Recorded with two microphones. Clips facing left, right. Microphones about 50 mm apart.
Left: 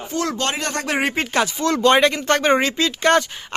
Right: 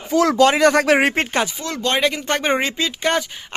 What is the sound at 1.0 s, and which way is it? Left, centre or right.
Speech, right.